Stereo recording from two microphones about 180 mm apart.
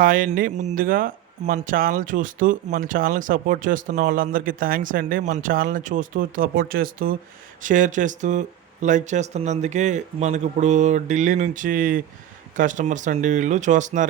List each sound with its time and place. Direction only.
0.0 s speech: 50° right (ahead or behind)